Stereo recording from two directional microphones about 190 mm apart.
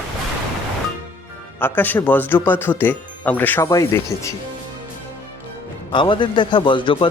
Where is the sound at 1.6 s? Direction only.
10° left (ahead or behind).